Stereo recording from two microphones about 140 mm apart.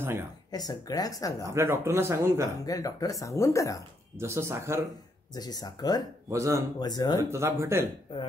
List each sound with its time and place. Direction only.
0.0 s speech: 15° right (ahead or behind)
0.5 s speech: 30° left (ahead or behind)
1.4 s speech: 20° right (ahead or behind)
2.6 s speech: 25° left (ahead or behind)
4.2 s speech: 20° right (ahead or behind)
5.3 s speech: 30° left (ahead or behind)
6.3 s speech: 20° right (ahead or behind)
6.8 s speech: 30° left (ahead or behind)
7.2 s speech: 20° right (ahead or behind)
8.1 s speech: 35° left (ahead or behind)